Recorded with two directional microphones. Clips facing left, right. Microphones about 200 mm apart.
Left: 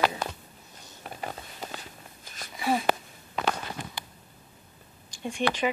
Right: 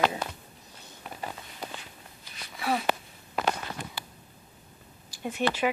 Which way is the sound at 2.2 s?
45° left (ahead or behind).